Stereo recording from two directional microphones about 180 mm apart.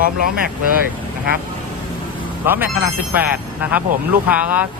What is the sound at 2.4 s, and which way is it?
Speech, 10° right (ahead or behind).